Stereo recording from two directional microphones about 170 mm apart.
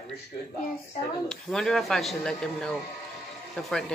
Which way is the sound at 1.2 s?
5° left (ahead or behind).